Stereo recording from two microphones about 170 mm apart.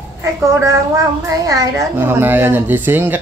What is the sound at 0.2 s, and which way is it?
Speech, 15° right (ahead or behind).